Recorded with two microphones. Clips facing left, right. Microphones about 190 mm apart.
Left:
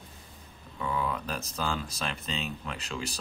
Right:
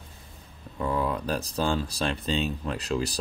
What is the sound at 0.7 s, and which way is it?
Speech, 40° right (ahead or behind).